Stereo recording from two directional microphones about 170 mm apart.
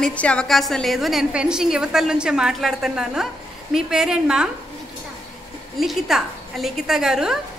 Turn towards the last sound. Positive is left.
turn(degrees=-5)  # may be behind; listen again after turning